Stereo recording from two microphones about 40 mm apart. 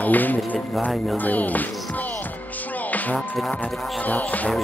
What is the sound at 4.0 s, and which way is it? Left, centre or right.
Music, left.